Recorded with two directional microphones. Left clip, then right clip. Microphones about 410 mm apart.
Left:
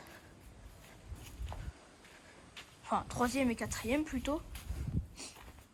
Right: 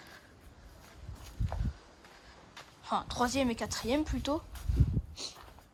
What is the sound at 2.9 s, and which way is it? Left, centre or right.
Speech, centre.